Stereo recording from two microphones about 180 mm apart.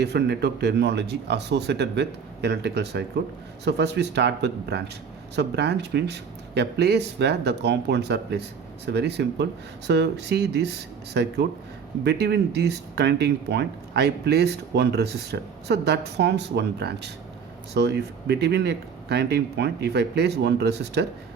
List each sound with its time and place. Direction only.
0.0 s speech: 65° right (ahead or behind)